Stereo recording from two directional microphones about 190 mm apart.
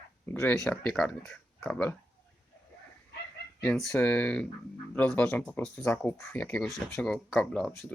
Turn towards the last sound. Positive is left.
turn(degrees=5)  # may be behind; listen again after turning